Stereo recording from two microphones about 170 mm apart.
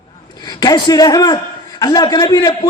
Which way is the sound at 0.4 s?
25° left (ahead or behind).